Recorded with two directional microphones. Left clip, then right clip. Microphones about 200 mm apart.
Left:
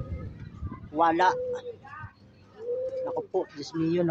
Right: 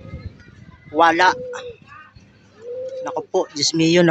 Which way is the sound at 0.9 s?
10° right (ahead or behind).